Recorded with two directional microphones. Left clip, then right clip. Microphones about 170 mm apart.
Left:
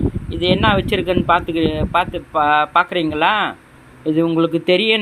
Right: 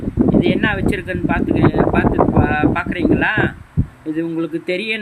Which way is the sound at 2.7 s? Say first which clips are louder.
Left 2 dB; 20° left (ahead or behind).